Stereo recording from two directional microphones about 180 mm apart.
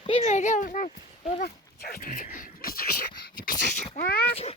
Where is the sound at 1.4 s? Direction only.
55° left (ahead or behind).